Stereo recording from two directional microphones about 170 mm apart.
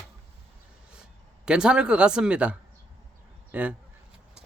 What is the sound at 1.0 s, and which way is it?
Speech, 5° right (ahead or behind).